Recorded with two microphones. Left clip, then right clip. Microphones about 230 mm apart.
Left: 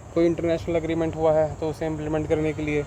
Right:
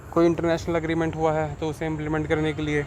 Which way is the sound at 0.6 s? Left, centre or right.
Right.